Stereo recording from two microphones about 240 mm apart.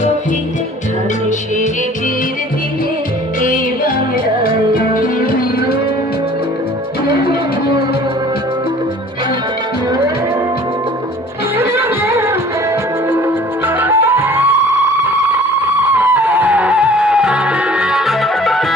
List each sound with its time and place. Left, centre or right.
3.4 s music: left
11.5 s music: centre
15.8 s music: centre